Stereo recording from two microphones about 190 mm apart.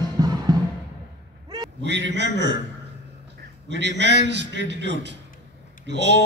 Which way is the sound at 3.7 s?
65° right (ahead or behind).